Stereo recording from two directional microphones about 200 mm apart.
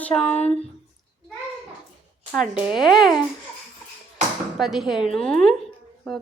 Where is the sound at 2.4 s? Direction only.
5° right (ahead or behind).